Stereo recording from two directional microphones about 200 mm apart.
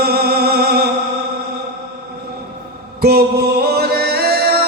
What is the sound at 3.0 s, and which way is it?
Mantra, 50° right (ahead or behind).